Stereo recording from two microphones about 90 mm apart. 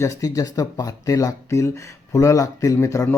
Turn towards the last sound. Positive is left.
turn(degrees=35)  # may be behind; listen again after turning